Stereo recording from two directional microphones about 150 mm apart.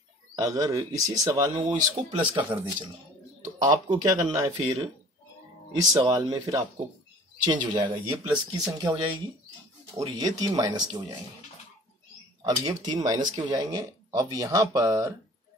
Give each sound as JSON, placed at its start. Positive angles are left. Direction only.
{"t": 0.4, "sound": "speech", "side_deg": -25}
{"t": 2.1, "sound": "speech", "side_deg": -35}
{"t": 5.8, "sound": "speech", "side_deg": -25}
{"t": 12.4, "sound": "speech", "side_deg": -25}